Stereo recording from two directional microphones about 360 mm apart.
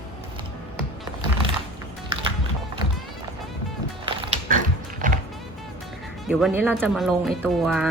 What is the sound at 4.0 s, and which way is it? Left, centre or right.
Music, right.